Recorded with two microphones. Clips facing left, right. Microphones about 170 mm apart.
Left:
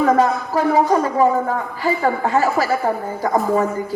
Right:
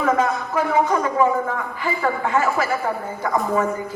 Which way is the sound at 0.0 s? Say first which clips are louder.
Left 4 dB; 35° left (ahead or behind).